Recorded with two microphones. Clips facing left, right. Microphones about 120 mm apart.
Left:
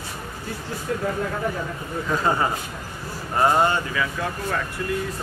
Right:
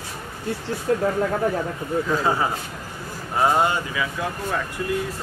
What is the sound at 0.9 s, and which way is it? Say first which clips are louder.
Speech: right 6 dB; 35° right (ahead or behind).